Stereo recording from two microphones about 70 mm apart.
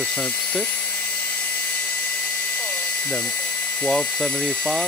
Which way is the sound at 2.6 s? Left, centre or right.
Centre.